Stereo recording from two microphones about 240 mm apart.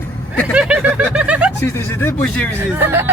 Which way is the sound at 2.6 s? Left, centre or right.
Centre.